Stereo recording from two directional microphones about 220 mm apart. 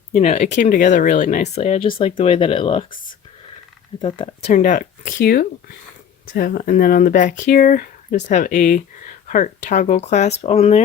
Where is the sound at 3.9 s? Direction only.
20° left (ahead or behind).